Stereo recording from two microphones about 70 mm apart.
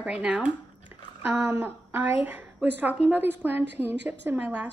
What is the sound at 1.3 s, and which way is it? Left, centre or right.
A woman's voice, right.